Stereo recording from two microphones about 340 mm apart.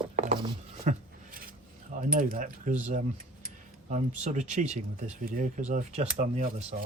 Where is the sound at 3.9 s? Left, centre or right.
Right.